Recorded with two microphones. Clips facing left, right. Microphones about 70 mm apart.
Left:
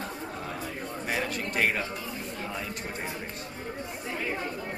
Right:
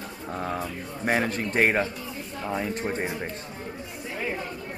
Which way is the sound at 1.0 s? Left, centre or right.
Right.